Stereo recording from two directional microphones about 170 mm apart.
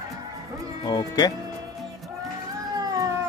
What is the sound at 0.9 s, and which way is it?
Speech, 25° left (ahead or behind).